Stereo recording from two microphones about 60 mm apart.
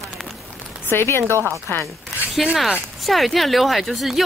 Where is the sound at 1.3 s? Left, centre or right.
Right.